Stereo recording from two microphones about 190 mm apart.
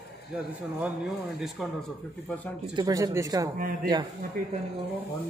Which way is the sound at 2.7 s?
20° right (ahead or behind).